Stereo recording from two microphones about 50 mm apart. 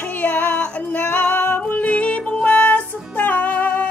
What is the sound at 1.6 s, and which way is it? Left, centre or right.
Music, left.